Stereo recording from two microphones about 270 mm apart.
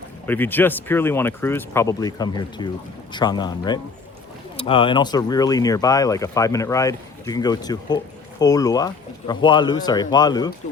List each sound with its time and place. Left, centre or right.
0.3 s speech: centre